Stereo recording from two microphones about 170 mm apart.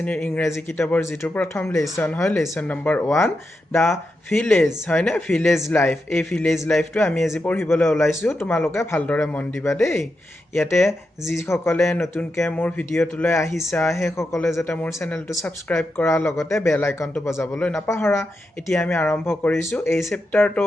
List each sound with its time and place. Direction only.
0.0 s a man's voice: 10° left (ahead or behind)
10.8 s a man's voice: centre (ahead or behind)
11.3 s speech: 15° left (ahead or behind)
15.7 s a man's voice: 5° left (ahead or behind)
16.0 s speech: 15° left (ahead or behind)
17.6 s a man's voice: 5° left (ahead or behind)
17.8 s speech: 15° left (ahead or behind)